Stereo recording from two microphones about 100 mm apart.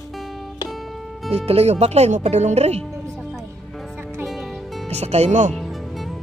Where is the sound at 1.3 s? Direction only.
90° right.